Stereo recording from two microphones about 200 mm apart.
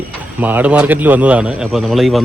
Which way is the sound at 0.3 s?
10° right (ahead or behind).